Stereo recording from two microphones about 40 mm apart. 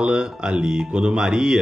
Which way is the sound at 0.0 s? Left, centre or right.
Centre.